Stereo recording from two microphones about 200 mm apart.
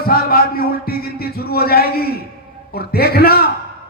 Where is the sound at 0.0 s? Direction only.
45° left (ahead or behind).